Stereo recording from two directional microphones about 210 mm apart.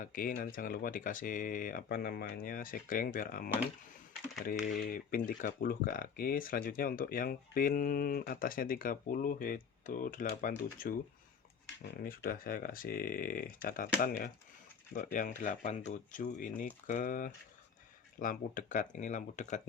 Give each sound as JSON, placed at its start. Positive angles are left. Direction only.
{"t": 0.0, "sound": "speech", "side_deg": 40}
{"t": 4.5, "sound": "speech", "side_deg": 0}
{"t": 4.9, "sound": "speech", "side_deg": 40}
{"t": 12.0, "sound": "speech", "side_deg": 45}
{"t": 14.9, "sound": "speech", "side_deg": 40}